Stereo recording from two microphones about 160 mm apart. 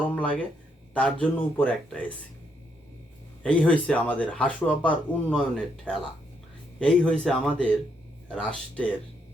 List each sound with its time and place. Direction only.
0.1 s speech: 10° left (ahead or behind)
3.4 s speech: 10° left (ahead or behind)